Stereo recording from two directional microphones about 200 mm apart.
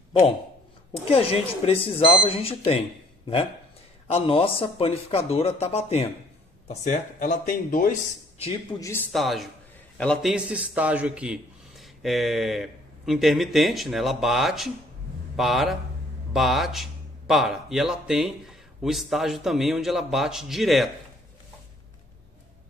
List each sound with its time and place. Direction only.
1.1 s speech: 30° left (ahead or behind)
4.1 s speech: 25° left (ahead or behind); by 7.9 s 45° left (ahead or behind)
8.7 s speech: 15° left (ahead or behind)
9.1 s a man's voice: centre (ahead or behind)